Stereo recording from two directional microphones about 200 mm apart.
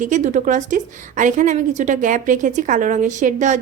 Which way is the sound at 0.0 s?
35° right (ahead or behind).